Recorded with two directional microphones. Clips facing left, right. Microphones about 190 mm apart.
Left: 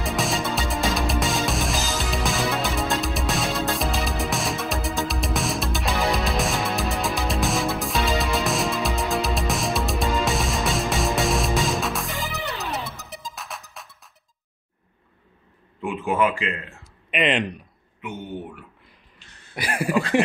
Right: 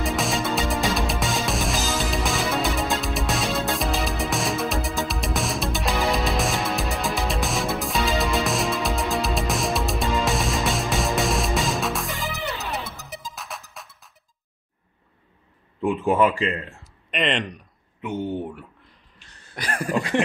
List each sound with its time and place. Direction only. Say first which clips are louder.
0.0 s music: right 1 dB; centre (ahead or behind)
15.8 s a sound: right 3 dB; 35° right (ahead or behind)
17.1 s speech: left 2 dB; 5° left (ahead or behind)
18.0 s speech: right 6 dB; 30° right (ahead or behind)
19.5 s speech: left 2 dB; 10° left (ahead or behind)